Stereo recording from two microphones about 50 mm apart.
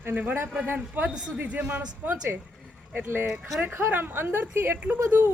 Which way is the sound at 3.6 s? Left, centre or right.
Right.